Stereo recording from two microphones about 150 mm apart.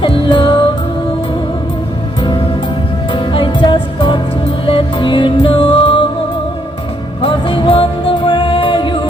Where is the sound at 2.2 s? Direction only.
30° left (ahead or behind).